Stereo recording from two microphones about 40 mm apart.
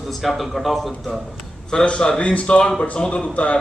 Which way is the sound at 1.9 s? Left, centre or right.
Left.